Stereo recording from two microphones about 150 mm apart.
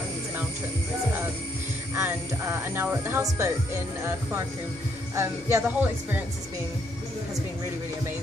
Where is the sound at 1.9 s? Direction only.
15° right (ahead or behind).